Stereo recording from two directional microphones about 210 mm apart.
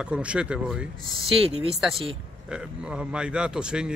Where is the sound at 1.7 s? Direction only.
Centre (ahead or behind).